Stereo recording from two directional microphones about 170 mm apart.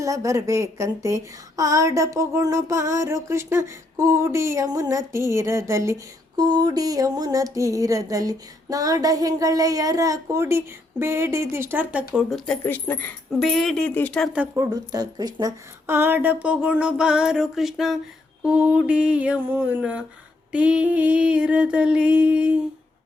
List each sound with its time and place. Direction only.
0.0 s a sound: 20° right (ahead or behind)
2.1 s a woman's voice: 15° right (ahead or behind)
3.9 s a sound: 15° right (ahead or behind)
11.0 s a woman's voice: 15° right (ahead or behind)
12.6 s speech: 10° left (ahead or behind)
14.3 s a woman's voice: 20° right (ahead or behind)